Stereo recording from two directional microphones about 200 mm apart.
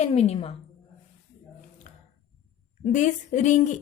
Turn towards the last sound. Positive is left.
turn(degrees=35)  # may be behind; listen again after turning